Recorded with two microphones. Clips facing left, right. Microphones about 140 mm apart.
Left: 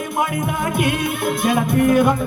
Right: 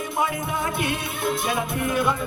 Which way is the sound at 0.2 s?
50° left (ahead or behind).